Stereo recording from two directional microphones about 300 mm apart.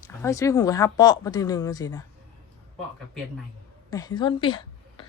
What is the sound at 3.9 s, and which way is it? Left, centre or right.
A woman's voice, centre.